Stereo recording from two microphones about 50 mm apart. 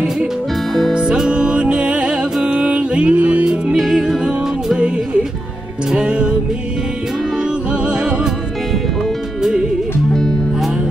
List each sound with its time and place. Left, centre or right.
0.9 s music: centre
3.7 s music: centre
5.9 s music: right